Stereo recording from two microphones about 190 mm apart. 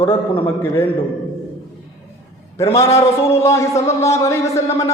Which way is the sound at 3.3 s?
15° left (ahead or behind).